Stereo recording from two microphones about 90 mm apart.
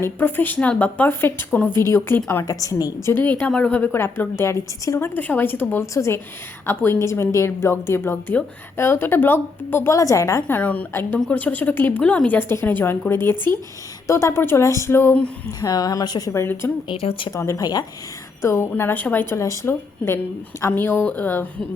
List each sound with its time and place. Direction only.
0.0 s a woman's voice: 20° left (ahead or behind)
2.4 s speech: 40° left (ahead or behind)
3.1 s a woman's voice: 20° left (ahead or behind)
3.9 s a woman's voice: 25° left (ahead or behind)
5.8 s a woman's voice: 35° left (ahead or behind)
9.9 s speech: 35° left (ahead or behind)
10.4 s a woman's voice: 15° left (ahead or behind)
15.6 s speech: 40° left (ahead or behind)
16.3 s a woman's voice: 25° left (ahead or behind)
16.9 s speech: 80° left
17.3 s a woman's voice: 35° left (ahead or behind)
19.3 s a woman's voice: 30° left (ahead or behind)